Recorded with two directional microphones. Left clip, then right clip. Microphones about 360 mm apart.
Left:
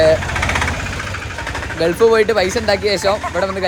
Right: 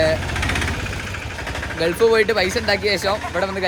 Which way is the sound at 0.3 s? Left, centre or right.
Centre.